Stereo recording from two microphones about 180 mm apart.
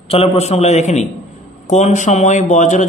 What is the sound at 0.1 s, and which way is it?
A man's voice, 35° left (ahead or behind).